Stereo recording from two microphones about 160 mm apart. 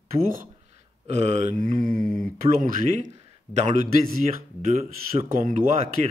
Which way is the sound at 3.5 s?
45° right (ahead or behind).